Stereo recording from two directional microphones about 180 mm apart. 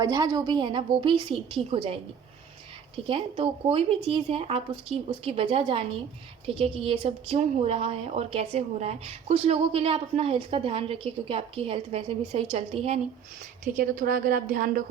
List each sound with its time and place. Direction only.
0.0 s a woman's voice: 20° right (ahead or behind)
13.7 s a woman's voice: 55° right (ahead or behind)